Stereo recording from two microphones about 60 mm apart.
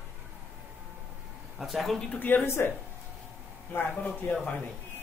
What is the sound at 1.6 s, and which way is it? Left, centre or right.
Speech, centre.